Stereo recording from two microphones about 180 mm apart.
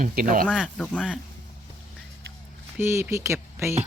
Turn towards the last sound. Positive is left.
turn(degrees=-15)  # may be behind; listen again after turning